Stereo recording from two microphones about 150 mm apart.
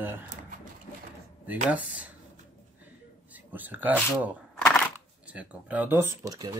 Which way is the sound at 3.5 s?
10° right (ahead or behind).